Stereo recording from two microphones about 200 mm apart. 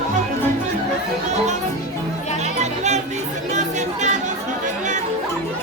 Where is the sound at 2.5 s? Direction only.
35° right (ahead or behind).